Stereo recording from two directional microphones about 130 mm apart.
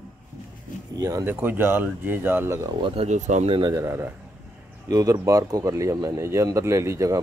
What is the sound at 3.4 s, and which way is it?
Speech, 40° right (ahead or behind).